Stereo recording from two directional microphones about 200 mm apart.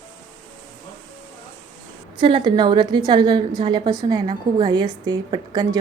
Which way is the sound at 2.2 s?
25° right (ahead or behind).